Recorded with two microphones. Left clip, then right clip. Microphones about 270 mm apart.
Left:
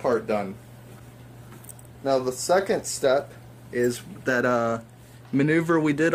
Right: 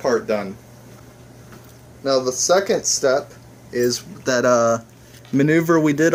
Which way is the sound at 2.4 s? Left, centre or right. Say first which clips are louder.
Right 5 dB; centre.